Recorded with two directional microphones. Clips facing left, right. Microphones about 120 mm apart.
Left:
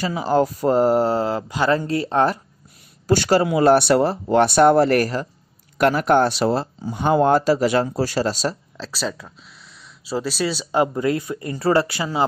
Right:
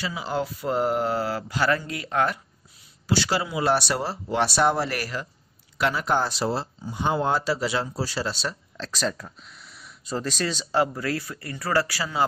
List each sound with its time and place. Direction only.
0.0 s speech: 45° left (ahead or behind); by 1.8 s 20° left (ahead or behind)
1.9 s speech: 35° left (ahead or behind)
3.1 s speech: 50° left (ahead or behind)
5.8 s speech: 55° left (ahead or behind)
8.7 s a sound: 5° left (ahead or behind)
10.1 s speech: 10° left (ahead or behind)